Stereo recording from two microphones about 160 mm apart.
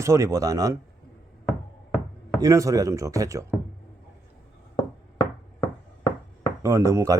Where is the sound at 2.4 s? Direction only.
20° right (ahead or behind).